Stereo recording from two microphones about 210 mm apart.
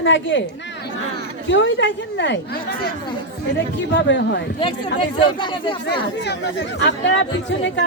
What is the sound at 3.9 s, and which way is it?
Speech, 60° left (ahead or behind).